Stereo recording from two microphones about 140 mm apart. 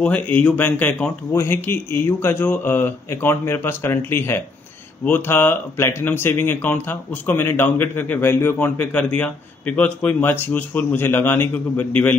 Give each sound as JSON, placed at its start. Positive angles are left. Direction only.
{"t": 0.0, "sound": "speech", "side_deg": 10}